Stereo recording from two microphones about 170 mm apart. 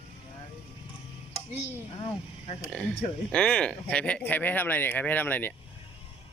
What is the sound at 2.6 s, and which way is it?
Speech, 5° left (ahead or behind).